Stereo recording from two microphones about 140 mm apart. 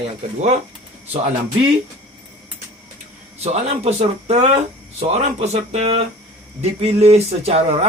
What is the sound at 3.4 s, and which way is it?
Speech, 50° right (ahead or behind).